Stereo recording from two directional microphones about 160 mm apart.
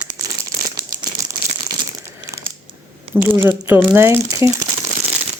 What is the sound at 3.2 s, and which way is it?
Speech, 15° right (ahead or behind).